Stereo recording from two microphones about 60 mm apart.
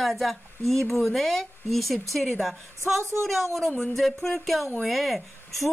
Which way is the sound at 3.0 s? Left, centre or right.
Right.